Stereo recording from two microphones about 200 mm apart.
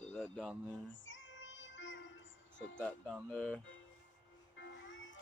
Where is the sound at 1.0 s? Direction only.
70° left (ahead or behind).